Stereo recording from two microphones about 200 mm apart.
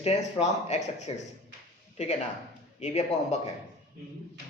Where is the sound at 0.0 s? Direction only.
30° left (ahead or behind).